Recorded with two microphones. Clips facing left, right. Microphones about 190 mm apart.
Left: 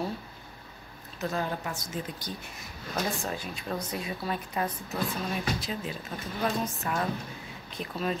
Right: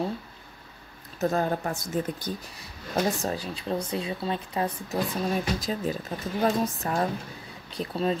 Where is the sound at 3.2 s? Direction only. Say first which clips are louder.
Right 4 dB; 35° right (ahead or behind).